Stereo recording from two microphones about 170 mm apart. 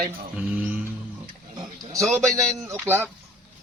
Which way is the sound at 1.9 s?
Centre (ahead or behind).